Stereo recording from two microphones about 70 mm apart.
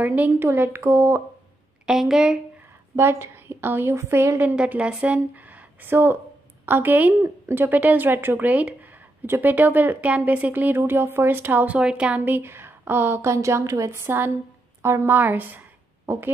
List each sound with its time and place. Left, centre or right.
0.0 s a woman's voice: right
1.9 s speech: centre
3.0 s a woman's voice: right
4.6 s speech: centre
5.9 s a woman's voice: right
12.4 s a woman's voice: right
14.0 s a woman's voice: right
14.8 s a woman's voice: right
15.1 s speech: right
16.1 s speech: right